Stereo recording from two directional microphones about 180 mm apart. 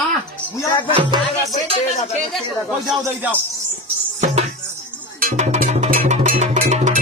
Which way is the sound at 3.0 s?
10° right (ahead or behind).